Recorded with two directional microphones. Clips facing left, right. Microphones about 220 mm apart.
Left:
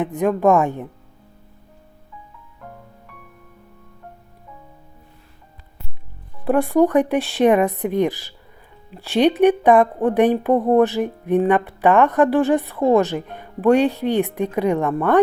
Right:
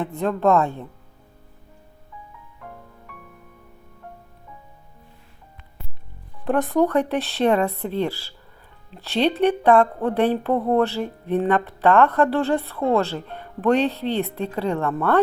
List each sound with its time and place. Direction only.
0.0 s a woman's voice: 15° left (ahead or behind)
6.4 s a woman's voice: 10° left (ahead or behind)